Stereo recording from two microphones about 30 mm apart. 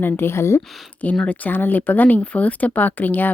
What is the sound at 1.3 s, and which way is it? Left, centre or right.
Speech, left.